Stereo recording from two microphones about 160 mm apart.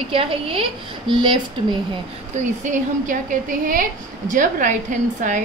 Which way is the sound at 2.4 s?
50° right (ahead or behind).